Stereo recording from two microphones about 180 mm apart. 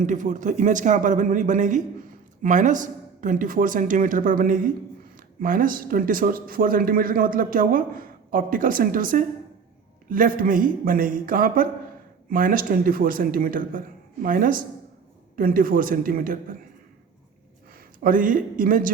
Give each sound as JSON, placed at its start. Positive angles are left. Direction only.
{"t": 0.0, "sound": "speech", "side_deg": -45}
{"t": 17.7, "sound": "a man's voice", "side_deg": -50}